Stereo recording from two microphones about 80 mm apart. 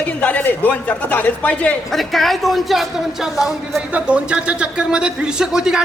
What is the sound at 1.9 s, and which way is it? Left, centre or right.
A man's voice, centre.